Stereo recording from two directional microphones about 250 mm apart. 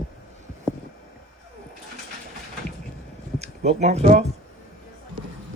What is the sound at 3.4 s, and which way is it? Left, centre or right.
Speech, right.